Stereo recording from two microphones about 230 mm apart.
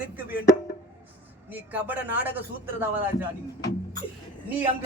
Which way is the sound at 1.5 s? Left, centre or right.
Centre.